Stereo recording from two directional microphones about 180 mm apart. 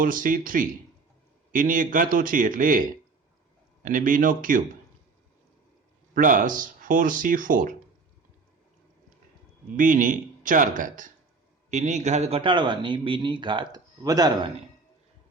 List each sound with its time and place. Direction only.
0.0 s speech: 50° right (ahead or behind)
3.8 s speech: 50° right (ahead or behind)
6.1 s speech: 45° right (ahead or behind)
9.7 s speech: 45° right (ahead or behind); by 14.5 s 20° right (ahead or behind)